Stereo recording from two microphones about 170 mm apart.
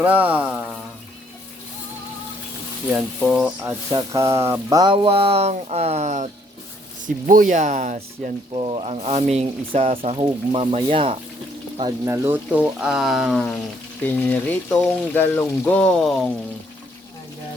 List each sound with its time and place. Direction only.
0.0 s speech: 10° right (ahead or behind)
2.9 s speech: 5° right (ahead or behind); by 4.9 s 20° right (ahead or behind)
5.0 s speech: 35° right (ahead or behind)
8.5 s speech: 35° right (ahead or behind)
12.0 s speech: 15° right (ahead or behind)
14.0 s speech: 10° left (ahead or behind)